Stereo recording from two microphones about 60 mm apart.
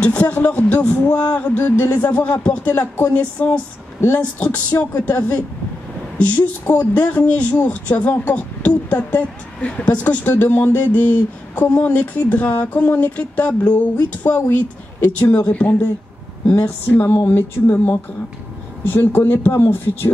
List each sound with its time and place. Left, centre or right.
0.0 s speech: left
2.7 s speech: left
17.0 s speech: left
17.3 s speech: left